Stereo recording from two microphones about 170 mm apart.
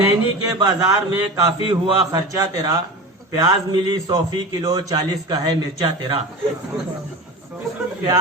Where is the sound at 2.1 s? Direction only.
20° right (ahead or behind).